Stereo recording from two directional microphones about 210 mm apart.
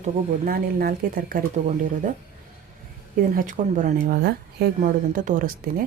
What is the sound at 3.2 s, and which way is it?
Speech, 40° right (ahead or behind).